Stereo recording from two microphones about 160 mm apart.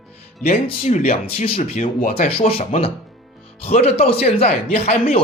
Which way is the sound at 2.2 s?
40° left (ahead or behind).